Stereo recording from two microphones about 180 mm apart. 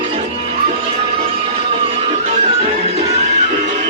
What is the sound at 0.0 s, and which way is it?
Music, 35° right (ahead or behind).